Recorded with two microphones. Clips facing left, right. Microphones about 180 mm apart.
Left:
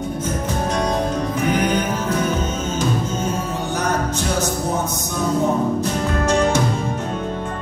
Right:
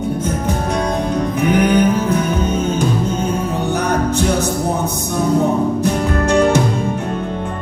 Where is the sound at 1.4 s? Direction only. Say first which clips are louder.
Right 6 dB; 60° right (ahead or behind).